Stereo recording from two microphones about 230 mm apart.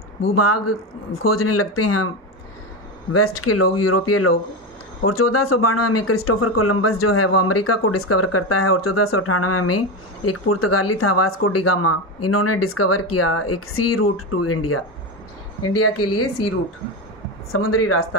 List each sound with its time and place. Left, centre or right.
0.3 s speech: left
3.1 s speech: left
15.6 s speech: left
17.5 s speech: left